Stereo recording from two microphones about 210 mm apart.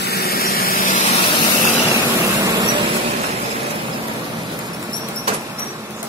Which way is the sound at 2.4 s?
20° right (ahead or behind).